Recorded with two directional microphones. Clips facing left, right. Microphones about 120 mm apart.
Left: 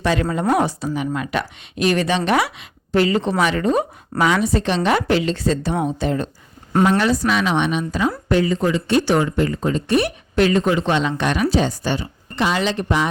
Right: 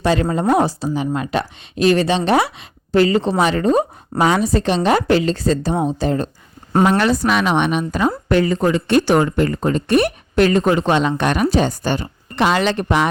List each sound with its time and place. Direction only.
0.0 s a woman's voice: 35° right (ahead or behind)
6.8 s speech: 60° right (ahead or behind)